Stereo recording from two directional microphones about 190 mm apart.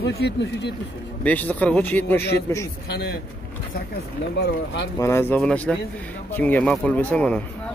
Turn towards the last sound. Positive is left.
turn(degrees=5)  # may be behind; listen again after turning